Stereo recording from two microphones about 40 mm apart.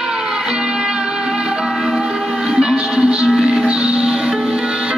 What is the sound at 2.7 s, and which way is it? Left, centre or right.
Music, right.